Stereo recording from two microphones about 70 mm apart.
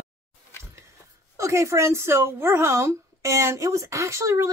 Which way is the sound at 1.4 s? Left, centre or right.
Right.